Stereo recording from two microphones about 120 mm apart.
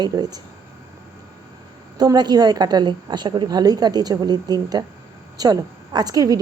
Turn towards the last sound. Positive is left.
turn(degrees=-30)  # may be behind; listen again after turning